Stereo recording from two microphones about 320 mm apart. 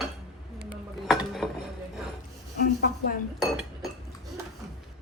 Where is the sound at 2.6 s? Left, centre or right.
Left.